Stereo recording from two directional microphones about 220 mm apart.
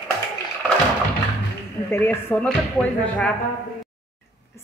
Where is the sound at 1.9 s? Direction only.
5° left (ahead or behind).